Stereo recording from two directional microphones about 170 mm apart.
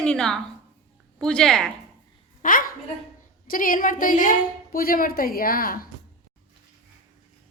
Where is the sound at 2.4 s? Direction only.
55° left (ahead or behind).